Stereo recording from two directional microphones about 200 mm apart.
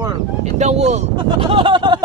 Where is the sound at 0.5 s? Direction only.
35° right (ahead or behind).